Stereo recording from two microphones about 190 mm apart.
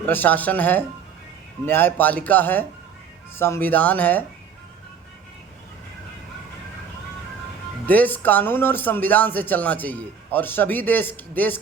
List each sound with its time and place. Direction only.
0.0 s speech: 10° left (ahead or behind)
7.9 s speech: 10° left (ahead or behind)